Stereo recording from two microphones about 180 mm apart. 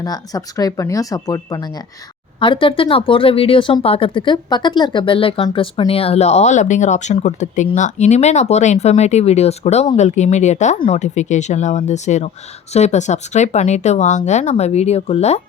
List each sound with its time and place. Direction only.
0.0 s speech: 20° left (ahead or behind); by 15.4 s 35° left (ahead or behind)